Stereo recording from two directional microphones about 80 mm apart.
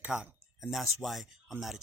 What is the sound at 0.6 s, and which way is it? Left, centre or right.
Speech, centre.